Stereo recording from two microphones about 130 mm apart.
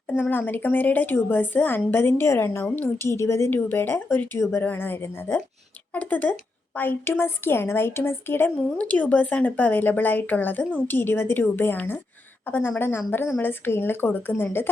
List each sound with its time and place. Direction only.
0.1 s a woman's voice: 15° left (ahead or behind)